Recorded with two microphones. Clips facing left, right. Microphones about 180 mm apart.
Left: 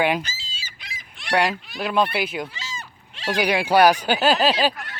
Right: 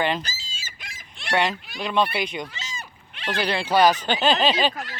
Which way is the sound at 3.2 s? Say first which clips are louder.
Left 4 dB; 10° left (ahead or behind).